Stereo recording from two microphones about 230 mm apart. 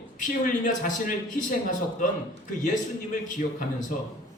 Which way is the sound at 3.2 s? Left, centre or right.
Left.